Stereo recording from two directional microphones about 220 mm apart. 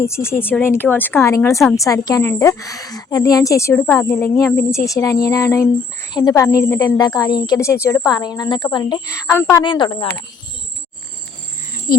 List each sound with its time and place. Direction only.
0.0 s a woman's voice: 10° left (ahead or behind)
11.9 s speech: 40° left (ahead or behind)